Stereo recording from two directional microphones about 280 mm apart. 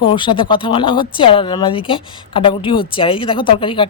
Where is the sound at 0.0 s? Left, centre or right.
Centre.